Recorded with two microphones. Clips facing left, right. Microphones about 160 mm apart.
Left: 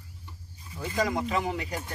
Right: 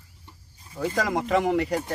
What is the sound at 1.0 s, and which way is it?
Speech, 80° right.